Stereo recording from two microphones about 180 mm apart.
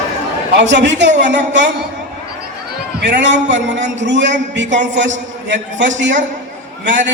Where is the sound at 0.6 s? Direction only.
75° right (ahead or behind).